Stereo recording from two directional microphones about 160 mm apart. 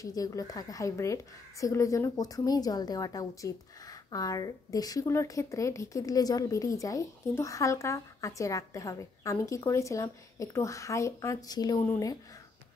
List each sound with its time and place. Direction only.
0.0 s speech: 20° left (ahead or behind)